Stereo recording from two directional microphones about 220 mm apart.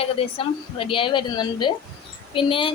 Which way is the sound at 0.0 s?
25° left (ahead or behind).